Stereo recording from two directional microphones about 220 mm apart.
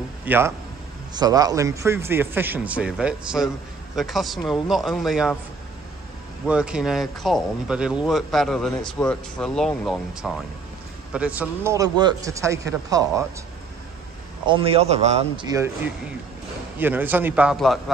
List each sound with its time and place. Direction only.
0.2 s a man's voice: 10° right (ahead or behind)
6.4 s a man's voice: 5° right (ahead or behind)
14.4 s a man's voice: 25° right (ahead or behind)
15.4 s a man's voice: 15° right (ahead or behind)